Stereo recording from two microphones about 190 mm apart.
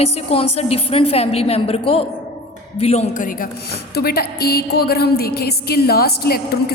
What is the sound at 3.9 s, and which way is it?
A woman's voice, 55° left (ahead or behind).